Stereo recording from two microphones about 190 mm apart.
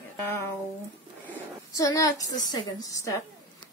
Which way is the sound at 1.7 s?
20° left (ahead or behind).